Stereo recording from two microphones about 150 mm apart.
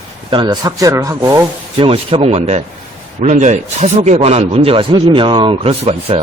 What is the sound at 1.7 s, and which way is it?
A man's voice, 40° right (ahead or behind).